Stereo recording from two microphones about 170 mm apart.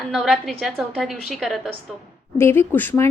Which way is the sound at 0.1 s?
Centre (ahead or behind).